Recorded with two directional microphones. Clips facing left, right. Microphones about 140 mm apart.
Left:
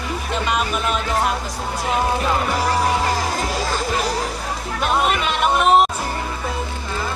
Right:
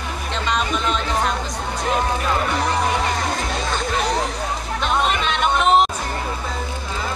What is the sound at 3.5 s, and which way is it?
Music, 5° left (ahead or behind).